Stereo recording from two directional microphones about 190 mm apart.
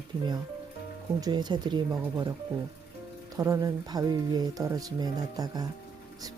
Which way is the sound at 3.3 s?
15° right (ahead or behind).